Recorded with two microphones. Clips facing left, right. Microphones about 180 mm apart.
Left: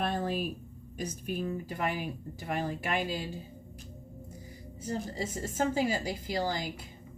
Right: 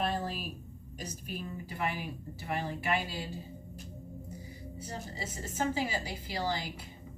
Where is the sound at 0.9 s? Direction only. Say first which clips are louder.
Left 6 dB; 45° left (ahead or behind).